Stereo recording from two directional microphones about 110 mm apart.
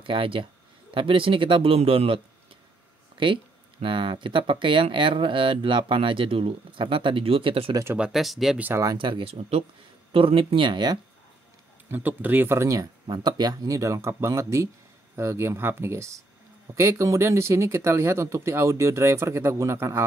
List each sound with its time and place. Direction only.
0.0 s speech: 55° right (ahead or behind)
3.8 s speech: 50° right (ahead or behind)
8.1 s speech: centre (ahead or behind)
8.9 s speech: 50° right (ahead or behind); by 9.7 s 65° right (ahead or behind)
10.1 s speech: 55° right (ahead or behind)
11.9 s speech: 15° right (ahead or behind)
13.0 s speech: 45° right (ahead or behind); by 20.1 s 25° right (ahead or behind)